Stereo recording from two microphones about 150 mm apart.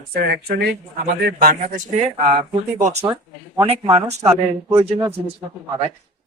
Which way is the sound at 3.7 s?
45° right (ahead or behind).